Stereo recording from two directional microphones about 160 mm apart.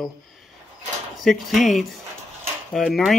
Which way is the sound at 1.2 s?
Centre (ahead or behind).